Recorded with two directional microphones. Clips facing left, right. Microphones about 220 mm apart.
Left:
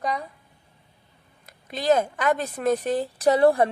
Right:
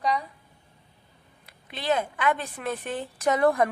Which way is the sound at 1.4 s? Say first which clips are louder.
Left 6 dB; 40° left (ahead or behind).